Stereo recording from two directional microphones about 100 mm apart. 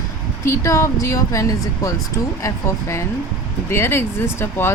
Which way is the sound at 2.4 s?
30° left (ahead or behind).